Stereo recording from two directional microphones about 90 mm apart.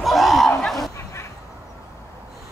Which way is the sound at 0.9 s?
30° left (ahead or behind).